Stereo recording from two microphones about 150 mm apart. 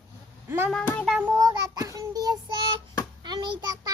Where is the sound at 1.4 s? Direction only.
25° right (ahead or behind).